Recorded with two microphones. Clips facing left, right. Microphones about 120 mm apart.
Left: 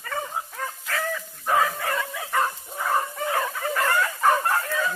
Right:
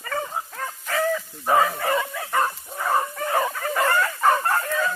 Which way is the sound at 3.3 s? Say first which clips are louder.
Right 4 dB; 10° right (ahead or behind).